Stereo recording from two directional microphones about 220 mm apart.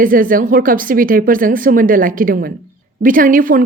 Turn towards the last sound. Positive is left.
turn(degrees=-40)  # may be behind; listen again after turning